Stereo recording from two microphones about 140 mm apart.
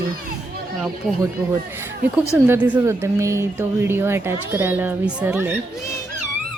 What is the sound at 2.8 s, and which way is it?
A woman's voice, 20° right (ahead or behind).